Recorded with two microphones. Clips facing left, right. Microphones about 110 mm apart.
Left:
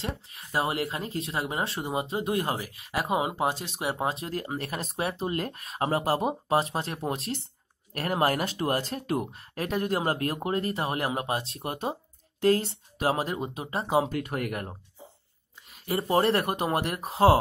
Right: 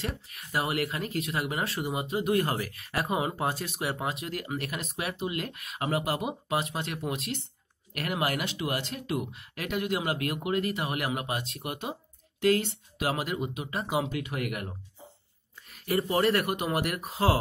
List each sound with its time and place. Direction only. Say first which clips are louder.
0.0 s speech: left 1 dB; 25° left (ahead or behind)
14.1 s speech: left 2 dB; 40° left (ahead or behind)
15.7 s speech: left 2 dB; 25° left (ahead or behind)